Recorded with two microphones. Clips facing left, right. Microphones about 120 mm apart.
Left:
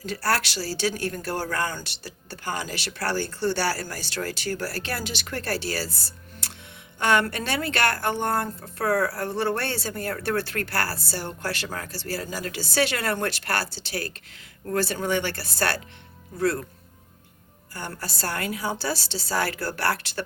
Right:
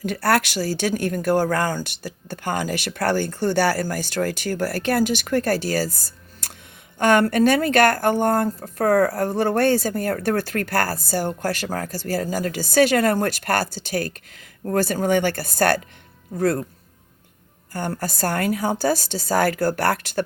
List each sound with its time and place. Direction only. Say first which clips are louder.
0.0 s a woman's voice: right 6 dB; 55° right (ahead or behind)
17.7 s a woman's voice: right 8 dB; 50° right (ahead or behind)